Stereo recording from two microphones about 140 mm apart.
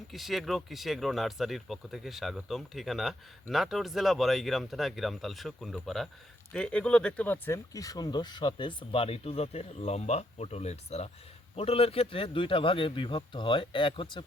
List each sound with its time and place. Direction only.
0.1 s speech: centre (ahead or behind); by 14.3 s 35° left (ahead or behind)